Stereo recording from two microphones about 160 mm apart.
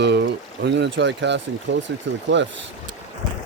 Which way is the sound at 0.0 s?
90° right.